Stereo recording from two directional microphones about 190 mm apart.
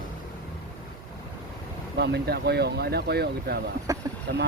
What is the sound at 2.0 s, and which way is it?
Speech, 60° right (ahead or behind).